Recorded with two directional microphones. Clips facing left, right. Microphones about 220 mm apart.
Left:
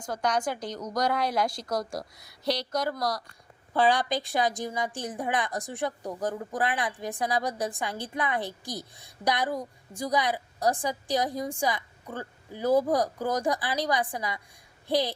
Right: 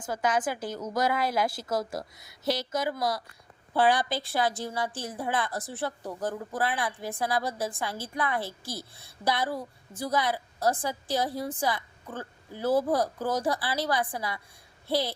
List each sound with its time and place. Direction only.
0.0 s a woman's voice: 5° right (ahead or behind)
3.8 s a woman's voice: 15° left (ahead or behind)